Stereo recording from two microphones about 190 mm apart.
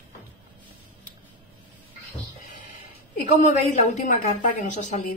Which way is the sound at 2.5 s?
45° left (ahead or behind).